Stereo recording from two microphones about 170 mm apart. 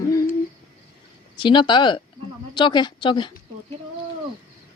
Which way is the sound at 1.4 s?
30° left (ahead or behind).